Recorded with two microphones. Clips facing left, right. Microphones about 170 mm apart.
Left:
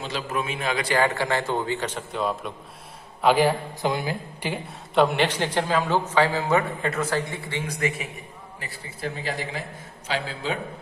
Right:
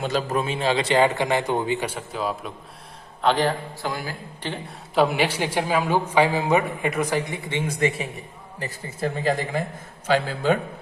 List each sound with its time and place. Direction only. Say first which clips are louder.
0.0 s a man's voice: right 5 dB; 45° right (ahead or behind); by 2.5 s centre (ahead or behind)
3.2 s a man's voice: left 2 dB; 10° left (ahead or behind)
4.9 s a man's voice: even; 5° right (ahead or behind); by 8.0 s 30° right (ahead or behind)
8.5 s speech: right 9 dB; 45° right (ahead or behind)